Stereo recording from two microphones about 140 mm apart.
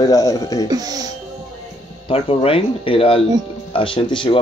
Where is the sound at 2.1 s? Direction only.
45° left (ahead or behind).